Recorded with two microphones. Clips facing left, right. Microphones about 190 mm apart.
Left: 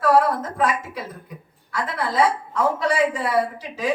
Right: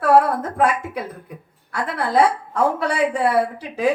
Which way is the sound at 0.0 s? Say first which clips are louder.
Right 2 dB; 55° right (ahead or behind).